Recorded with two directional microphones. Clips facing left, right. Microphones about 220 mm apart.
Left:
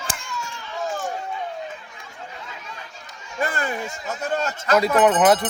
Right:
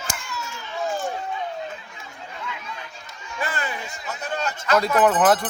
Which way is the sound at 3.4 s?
45° left (ahead or behind).